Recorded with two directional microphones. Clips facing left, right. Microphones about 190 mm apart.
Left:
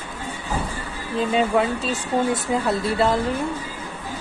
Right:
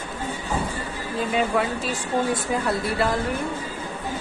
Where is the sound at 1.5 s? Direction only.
25° left (ahead or behind).